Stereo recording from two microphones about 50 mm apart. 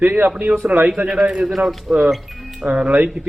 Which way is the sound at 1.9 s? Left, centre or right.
Centre.